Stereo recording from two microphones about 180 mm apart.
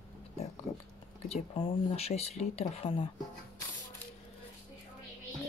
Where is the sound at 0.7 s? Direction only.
35° left (ahead or behind).